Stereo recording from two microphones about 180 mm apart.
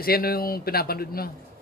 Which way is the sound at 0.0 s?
55° left (ahead or behind).